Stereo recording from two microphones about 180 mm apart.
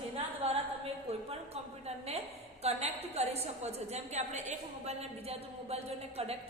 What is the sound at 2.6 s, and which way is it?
A woman's voice, 35° right (ahead or behind).